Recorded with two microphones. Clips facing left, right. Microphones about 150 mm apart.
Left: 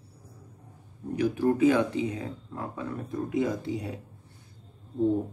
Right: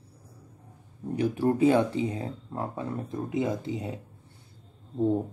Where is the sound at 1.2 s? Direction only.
30° right (ahead or behind).